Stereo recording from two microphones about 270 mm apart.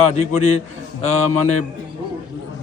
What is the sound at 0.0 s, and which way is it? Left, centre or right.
Speech, left.